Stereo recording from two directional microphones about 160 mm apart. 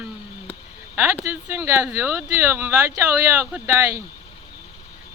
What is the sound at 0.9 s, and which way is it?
Speech, 10° right (ahead or behind).